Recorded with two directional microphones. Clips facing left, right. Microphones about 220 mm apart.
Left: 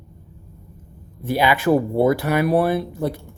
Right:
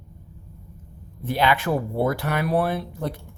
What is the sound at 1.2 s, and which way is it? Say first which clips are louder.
Speech: left 4 dB; 10° left (ahead or behind).